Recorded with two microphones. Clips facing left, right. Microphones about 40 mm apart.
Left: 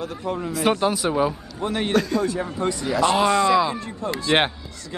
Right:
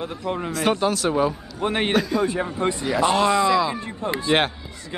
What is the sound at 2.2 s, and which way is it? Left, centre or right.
Speech, right.